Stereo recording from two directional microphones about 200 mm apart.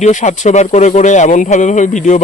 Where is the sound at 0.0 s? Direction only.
35° left (ahead or behind).